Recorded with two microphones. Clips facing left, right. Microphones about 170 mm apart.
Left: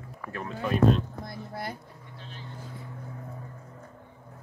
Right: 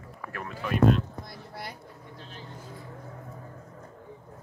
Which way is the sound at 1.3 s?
50° left (ahead or behind).